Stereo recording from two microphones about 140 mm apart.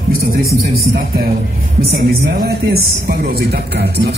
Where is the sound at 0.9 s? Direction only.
90° right.